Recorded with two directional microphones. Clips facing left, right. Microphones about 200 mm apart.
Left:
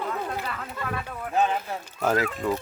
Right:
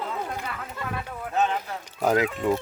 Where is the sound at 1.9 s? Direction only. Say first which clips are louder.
Right 2 dB; 15° right (ahead or behind).